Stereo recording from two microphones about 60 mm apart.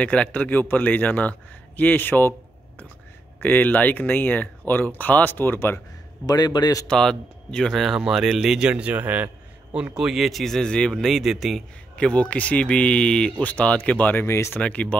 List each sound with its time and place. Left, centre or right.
0.0 s speech: left
3.4 s speech: left
6.2 s a man's voice: left
6.9 s speech: centre
8.8 s a man's voice: right
9.9 s speech: centre
11.9 s speech: centre
14.2 s speech: left
14.6 s speech: left